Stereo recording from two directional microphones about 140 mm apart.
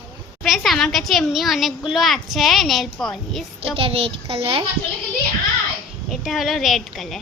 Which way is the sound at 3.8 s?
40° right (ahead or behind).